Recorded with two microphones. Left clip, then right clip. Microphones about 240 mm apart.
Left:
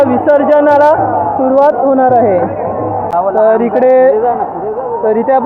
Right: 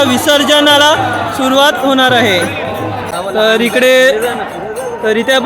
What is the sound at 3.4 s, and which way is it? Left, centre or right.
Speech, centre.